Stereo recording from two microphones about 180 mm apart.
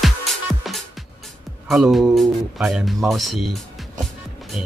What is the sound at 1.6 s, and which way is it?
Speech, centre (ahead or behind).